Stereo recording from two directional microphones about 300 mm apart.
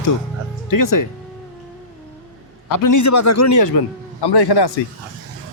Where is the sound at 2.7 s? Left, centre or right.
Left.